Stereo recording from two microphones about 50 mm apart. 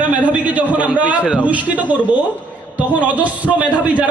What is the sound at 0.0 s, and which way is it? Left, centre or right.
A man's voice, right.